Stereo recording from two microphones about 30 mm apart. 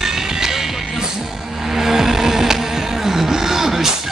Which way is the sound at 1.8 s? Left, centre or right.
Centre.